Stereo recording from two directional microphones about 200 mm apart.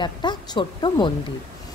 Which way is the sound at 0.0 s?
20° left (ahead or behind).